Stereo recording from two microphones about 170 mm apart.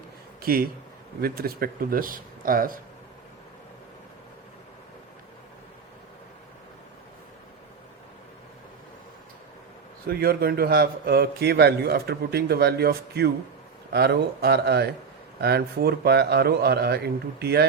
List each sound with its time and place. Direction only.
0.4 s speech: 60° right (ahead or behind)
10.1 s a man's voice: 65° right (ahead or behind)